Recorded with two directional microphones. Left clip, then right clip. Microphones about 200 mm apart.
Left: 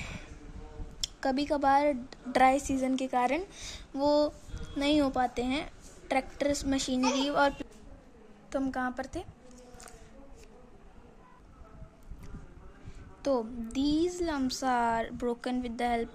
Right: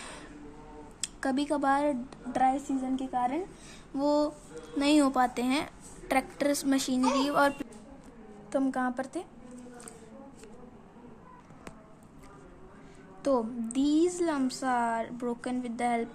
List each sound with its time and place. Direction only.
1.0 s speech: 15° left (ahead or behind)
2.3 s a woman's voice: 35° left (ahead or behind)
3.7 s a woman's voice: 10° left (ahead or behind)
13.2 s a woman's voice: 5° left (ahead or behind)